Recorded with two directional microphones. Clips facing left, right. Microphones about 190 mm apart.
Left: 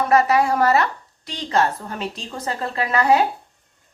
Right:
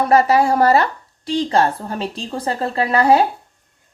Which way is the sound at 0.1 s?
30° right (ahead or behind).